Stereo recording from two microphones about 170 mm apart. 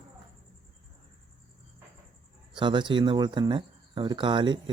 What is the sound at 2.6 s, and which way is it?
Speech, 30° right (ahead or behind).